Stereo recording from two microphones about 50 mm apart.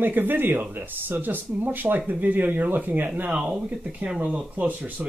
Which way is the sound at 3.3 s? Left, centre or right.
Centre.